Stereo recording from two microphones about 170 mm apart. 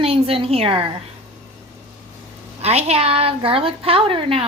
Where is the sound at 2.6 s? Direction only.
40° right (ahead or behind).